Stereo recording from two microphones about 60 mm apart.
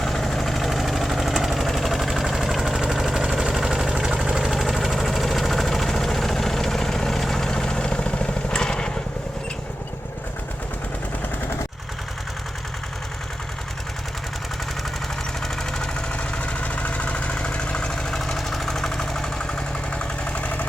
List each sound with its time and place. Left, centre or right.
0.0 s vehicle: centre
16.1 s vehicle: left